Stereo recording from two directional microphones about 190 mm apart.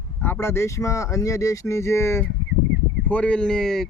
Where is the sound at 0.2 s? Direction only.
10° left (ahead or behind).